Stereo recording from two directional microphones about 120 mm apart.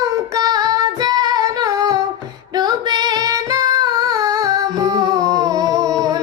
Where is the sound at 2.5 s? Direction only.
35° right (ahead or behind).